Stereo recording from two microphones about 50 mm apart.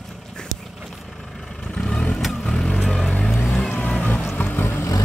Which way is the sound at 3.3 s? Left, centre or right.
Left.